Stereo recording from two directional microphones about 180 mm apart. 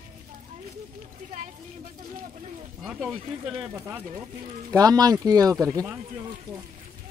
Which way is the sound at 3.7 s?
15° right (ahead or behind).